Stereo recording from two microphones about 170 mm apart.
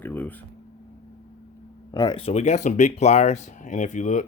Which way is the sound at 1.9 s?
25° left (ahead or behind).